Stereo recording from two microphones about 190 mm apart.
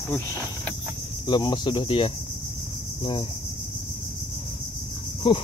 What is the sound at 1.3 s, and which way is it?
Speech, 25° left (ahead or behind).